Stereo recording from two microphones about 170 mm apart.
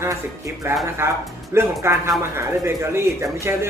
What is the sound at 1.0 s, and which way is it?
Speech, 15° right (ahead or behind).